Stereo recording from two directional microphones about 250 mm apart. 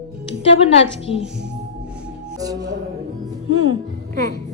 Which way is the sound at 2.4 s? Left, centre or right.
Centre.